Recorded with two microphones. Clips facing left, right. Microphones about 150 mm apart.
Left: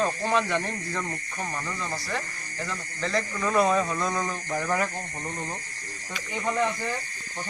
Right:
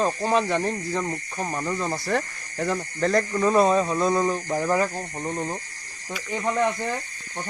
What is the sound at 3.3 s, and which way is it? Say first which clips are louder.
Speech: right 3 dB; 30° right (ahead or behind).